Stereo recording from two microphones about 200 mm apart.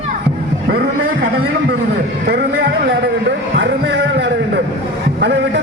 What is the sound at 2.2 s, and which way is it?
Speech, 60° right (ahead or behind).